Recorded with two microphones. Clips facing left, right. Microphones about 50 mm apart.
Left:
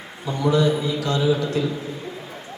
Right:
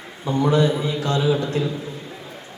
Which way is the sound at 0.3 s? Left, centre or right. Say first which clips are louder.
Right 1 dB; right.